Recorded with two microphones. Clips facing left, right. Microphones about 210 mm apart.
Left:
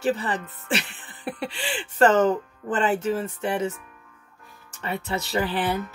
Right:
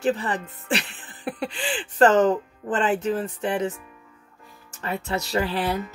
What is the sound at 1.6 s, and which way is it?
Speech, 40° right (ahead or behind).